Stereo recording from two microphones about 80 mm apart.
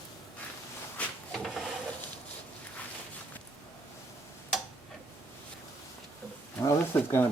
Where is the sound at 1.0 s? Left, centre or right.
Centre.